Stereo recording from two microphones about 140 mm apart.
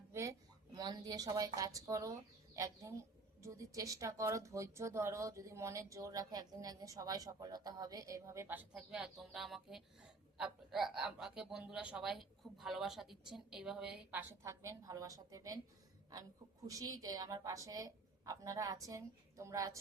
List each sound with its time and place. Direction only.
0.1 s a woman's voice: 20° right (ahead or behind)
16.6 s a woman's voice: 25° right (ahead or behind)